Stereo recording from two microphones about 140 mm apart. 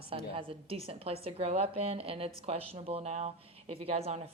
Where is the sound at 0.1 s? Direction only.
40° right (ahead or behind).